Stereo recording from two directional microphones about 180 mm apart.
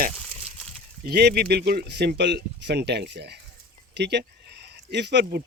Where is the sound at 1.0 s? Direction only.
60° right (ahead or behind).